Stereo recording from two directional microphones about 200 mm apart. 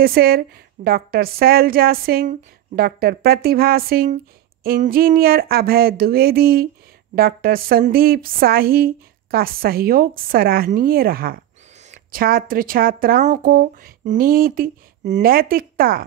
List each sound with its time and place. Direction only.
0.0 s speech: 50° right (ahead or behind)